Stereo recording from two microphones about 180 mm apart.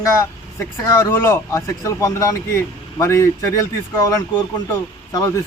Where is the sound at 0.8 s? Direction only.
15° left (ahead or behind).